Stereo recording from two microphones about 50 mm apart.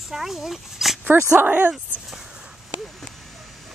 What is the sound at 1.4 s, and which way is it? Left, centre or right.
Speech, right.